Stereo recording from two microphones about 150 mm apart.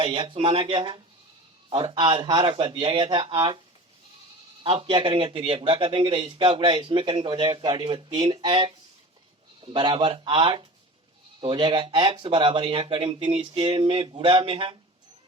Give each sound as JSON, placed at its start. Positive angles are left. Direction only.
{"t": 0.0, "sound": "speech", "side_deg": -35}
{"t": 4.6, "sound": "speech", "side_deg": -35}